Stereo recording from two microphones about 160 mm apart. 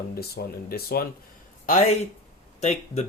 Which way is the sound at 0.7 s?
70° left (ahead or behind).